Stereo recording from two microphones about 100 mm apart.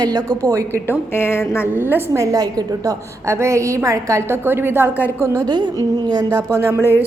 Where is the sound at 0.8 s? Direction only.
25° left (ahead or behind).